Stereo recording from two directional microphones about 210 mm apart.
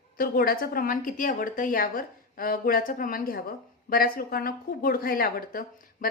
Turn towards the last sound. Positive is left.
turn(degrees=45)  # may be behind; listen again after turning